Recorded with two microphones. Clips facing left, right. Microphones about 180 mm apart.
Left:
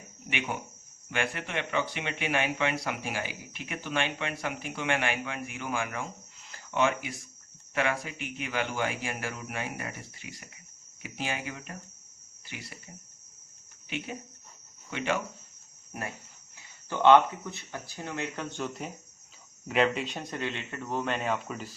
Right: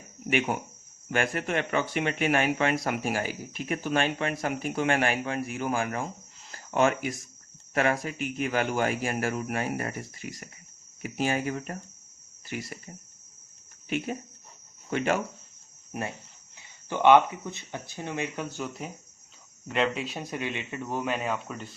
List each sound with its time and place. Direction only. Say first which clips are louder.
0.3 s speech: right 7 dB; 40° right (ahead or behind)
13.9 s speech: right 6 dB; 45° right (ahead or behind)
15.9 s speech: right 4 dB; 20° right (ahead or behind); by 21.8 s centre (ahead or behind)